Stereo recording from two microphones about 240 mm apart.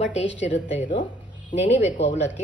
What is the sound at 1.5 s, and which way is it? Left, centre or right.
Speech, left.